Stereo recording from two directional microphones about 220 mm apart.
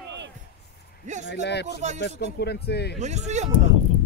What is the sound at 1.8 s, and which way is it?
Speech, 30° right (ahead or behind).